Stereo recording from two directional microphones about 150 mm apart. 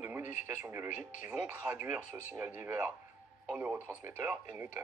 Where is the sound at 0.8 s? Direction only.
55° left (ahead or behind).